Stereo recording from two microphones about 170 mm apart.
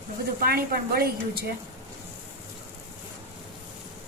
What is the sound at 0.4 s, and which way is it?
A woman's voice, 60° right (ahead or behind).